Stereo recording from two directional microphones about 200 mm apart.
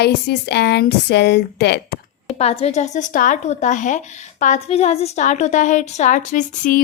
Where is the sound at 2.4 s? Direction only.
30° left (ahead or behind).